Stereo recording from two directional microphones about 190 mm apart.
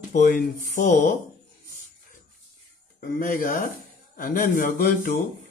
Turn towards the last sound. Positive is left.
turn(degrees=45)  # may be behind; listen again after turning